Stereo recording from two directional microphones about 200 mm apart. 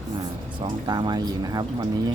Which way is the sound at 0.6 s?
20° right (ahead or behind).